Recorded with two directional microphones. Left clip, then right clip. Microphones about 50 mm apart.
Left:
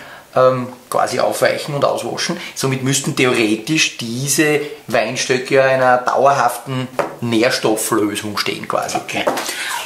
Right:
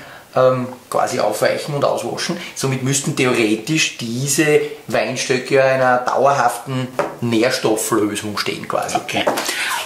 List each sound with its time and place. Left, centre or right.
0.3 s speech: left
8.9 s speech: centre
9.5 s a sound: right